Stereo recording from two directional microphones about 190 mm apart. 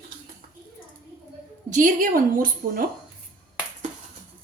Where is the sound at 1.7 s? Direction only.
45° right (ahead or behind).